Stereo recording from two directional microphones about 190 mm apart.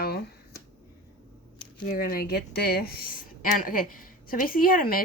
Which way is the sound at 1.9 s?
50° left (ahead or behind).